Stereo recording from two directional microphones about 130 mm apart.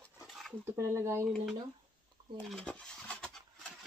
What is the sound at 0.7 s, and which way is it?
Speech, 20° right (ahead or behind).